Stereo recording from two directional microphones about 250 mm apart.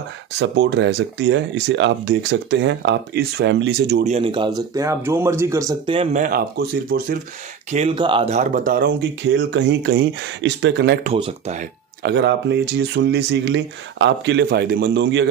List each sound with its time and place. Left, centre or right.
0.4 s speech: right
4.0 s speech: right
7.7 s speech: right
11.1 s speech: right
12.0 s speech: right